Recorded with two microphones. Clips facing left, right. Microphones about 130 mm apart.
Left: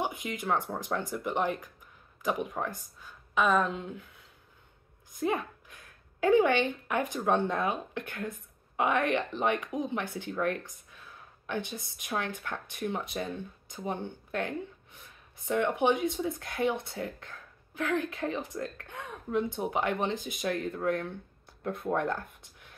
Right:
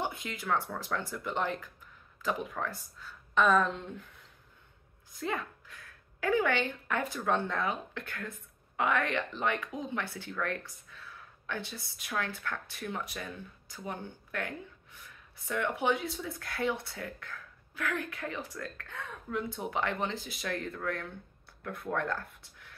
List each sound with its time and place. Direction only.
0.0 s speech: 15° left (ahead or behind)
5.1 s a woman's voice: 15° left (ahead or behind)